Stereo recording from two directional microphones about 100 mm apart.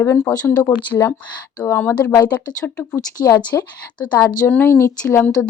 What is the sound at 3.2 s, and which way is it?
Speech, 35° left (ahead or behind).